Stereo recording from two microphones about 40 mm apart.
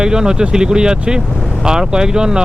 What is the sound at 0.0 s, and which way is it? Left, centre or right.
Speech, centre.